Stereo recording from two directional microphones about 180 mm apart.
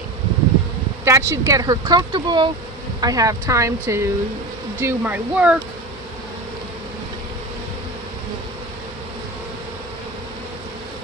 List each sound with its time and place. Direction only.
1.0 s speech: 15° right (ahead or behind)